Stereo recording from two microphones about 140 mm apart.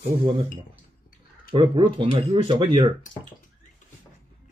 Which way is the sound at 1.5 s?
40° right (ahead or behind).